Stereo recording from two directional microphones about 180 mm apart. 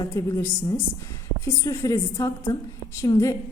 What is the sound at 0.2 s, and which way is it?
A woman's voice, 15° left (ahead or behind).